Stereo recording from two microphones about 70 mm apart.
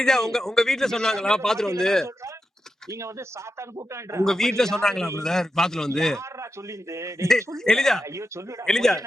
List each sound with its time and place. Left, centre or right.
0.0 s a man's voice: centre
2.9 s a man's voice: right
4.3 s a man's voice: centre
6.1 s a man's voice: right
7.3 s a man's voice: centre
8.0 s a man's voice: right
8.6 s a man's voice: centre